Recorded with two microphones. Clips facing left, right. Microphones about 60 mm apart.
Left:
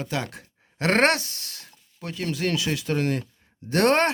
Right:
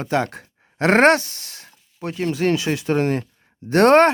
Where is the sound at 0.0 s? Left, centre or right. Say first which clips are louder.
Right 8 dB; right.